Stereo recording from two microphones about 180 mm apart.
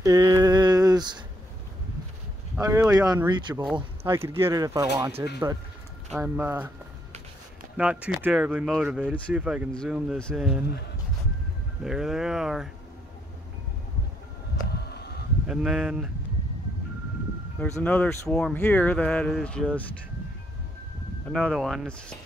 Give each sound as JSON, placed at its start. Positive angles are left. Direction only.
{"t": 0.0, "sound": "a sound", "side_deg": -20}
{"t": 2.6, "sound": "speech", "side_deg": -15}
{"t": 4.0, "sound": "speech", "side_deg": -15}
{"t": 7.7, "sound": "speech", "side_deg": -5}
{"t": 11.8, "sound": "speech", "side_deg": -5}
{"t": 14.9, "sound": "a sound", "side_deg": 65}
{"t": 15.4, "sound": "speech", "side_deg": -5}
{"t": 17.6, "sound": "speech", "side_deg": 10}
{"t": 21.3, "sound": "speech", "side_deg": 0}